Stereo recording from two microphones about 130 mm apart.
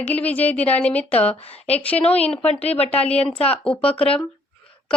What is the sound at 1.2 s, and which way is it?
Speech, 50° left (ahead or behind).